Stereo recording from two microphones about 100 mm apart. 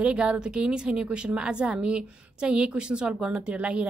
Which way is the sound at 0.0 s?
10° right (ahead or behind).